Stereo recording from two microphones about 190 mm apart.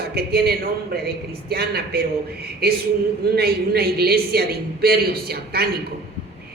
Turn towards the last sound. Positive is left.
turn(degrees=-55)  # may be behind; listen again after turning